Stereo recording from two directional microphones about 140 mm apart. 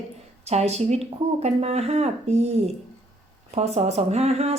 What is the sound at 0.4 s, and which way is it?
Speech, 50° right (ahead or behind).